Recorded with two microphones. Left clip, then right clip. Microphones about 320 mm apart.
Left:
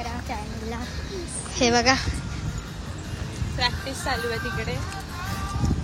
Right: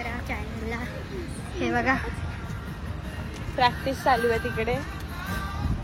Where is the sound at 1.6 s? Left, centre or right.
Centre.